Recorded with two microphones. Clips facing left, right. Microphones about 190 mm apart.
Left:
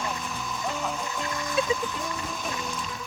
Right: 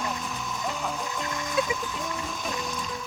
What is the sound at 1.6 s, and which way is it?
Music, 25° left (ahead or behind).